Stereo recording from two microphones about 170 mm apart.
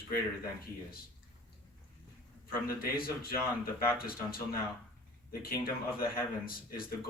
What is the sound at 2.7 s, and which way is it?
Speech, 60° left (ahead or behind).